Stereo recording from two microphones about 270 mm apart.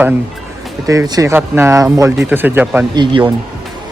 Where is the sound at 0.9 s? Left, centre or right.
Centre.